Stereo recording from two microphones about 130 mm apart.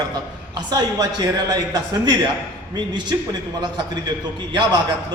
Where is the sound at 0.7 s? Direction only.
30° right (ahead or behind).